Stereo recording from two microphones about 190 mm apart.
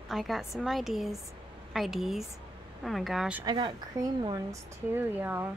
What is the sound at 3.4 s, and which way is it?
Speech, 25° right (ahead or behind).